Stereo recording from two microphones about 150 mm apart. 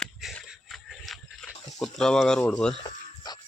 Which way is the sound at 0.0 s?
Centre (ahead or behind).